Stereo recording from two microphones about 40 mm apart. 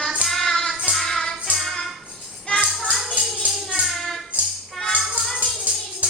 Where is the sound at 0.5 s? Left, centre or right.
Centre.